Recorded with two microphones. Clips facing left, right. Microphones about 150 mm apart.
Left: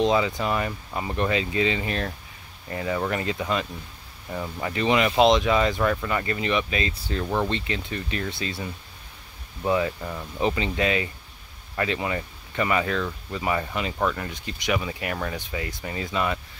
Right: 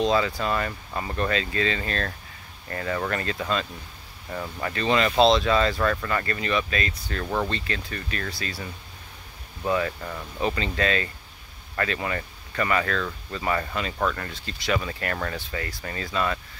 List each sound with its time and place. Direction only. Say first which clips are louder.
0.0 s speech: left 1 dB; 20° left (ahead or behind)